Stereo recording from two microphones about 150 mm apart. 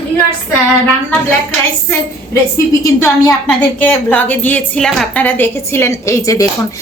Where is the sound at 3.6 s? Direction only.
10° left (ahead or behind).